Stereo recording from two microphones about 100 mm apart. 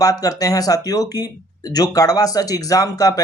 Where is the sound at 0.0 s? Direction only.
35° left (ahead or behind).